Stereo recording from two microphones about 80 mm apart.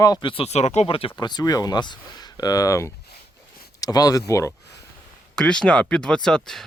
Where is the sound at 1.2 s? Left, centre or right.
Left.